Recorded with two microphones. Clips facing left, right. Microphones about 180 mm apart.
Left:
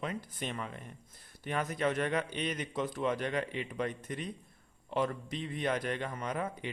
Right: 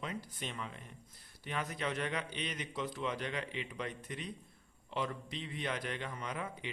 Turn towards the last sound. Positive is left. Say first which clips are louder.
# left 5 dB
turn(degrees=45)  # may be behind; listen again after turning